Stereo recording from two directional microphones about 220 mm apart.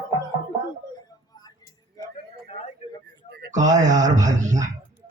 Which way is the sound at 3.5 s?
35° right (ahead or behind).